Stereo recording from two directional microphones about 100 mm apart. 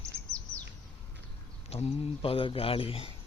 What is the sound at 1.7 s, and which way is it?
Speech, 80° left.